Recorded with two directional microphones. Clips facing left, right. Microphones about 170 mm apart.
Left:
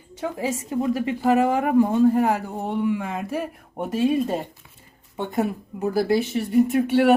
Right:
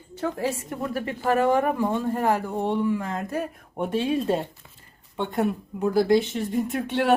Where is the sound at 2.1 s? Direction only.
10° left (ahead or behind).